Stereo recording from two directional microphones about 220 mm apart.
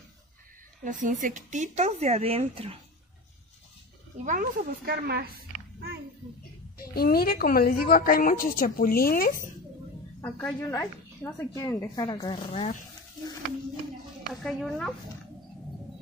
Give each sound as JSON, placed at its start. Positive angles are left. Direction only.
{"t": 0.8, "sound": "speech", "side_deg": -35}
{"t": 4.2, "sound": "speech", "side_deg": -35}
{"t": 6.8, "sound": "a woman's voice", "side_deg": 45}
{"t": 10.2, "sound": "a woman's voice", "side_deg": 5}
{"t": 14.4, "sound": "speech", "side_deg": 0}